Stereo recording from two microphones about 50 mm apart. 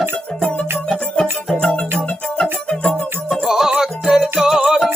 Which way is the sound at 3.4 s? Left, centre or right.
Centre.